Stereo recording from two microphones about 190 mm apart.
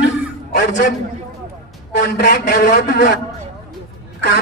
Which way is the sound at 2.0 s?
50° left (ahead or behind).